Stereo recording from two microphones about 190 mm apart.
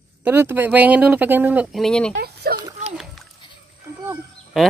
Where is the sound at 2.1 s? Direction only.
55° right (ahead or behind).